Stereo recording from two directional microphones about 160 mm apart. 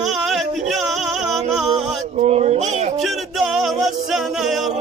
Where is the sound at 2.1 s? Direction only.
45° right (ahead or behind).